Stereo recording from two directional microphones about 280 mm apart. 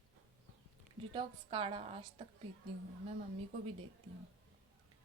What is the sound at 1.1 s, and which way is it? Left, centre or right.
Speech, centre.